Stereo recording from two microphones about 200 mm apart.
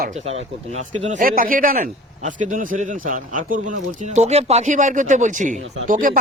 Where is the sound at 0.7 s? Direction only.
35° right (ahead or behind).